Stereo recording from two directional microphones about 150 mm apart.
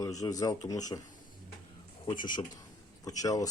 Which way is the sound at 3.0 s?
25° left (ahead or behind).